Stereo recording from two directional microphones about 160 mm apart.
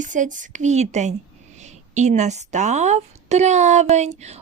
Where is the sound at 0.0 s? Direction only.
50° right (ahead or behind).